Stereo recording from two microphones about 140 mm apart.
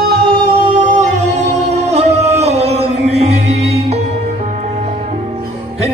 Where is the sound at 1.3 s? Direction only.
55° right (ahead or behind).